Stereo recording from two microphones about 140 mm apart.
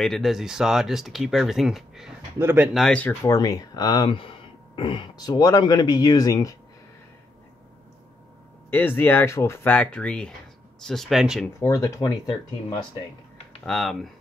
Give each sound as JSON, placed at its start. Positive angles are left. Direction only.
{"t": 0.0, "sound": "speech", "side_deg": 0}
{"t": 2.3, "sound": "speech", "side_deg": -15}
{"t": 2.7, "sound": "speech", "side_deg": 5}
{"t": 3.3, "sound": "speech", "side_deg": 25}
{"t": 8.6, "sound": "speech", "side_deg": 15}
{"t": 11.6, "sound": "speech", "side_deg": 20}
{"t": 13.7, "sound": "speech", "side_deg": 0}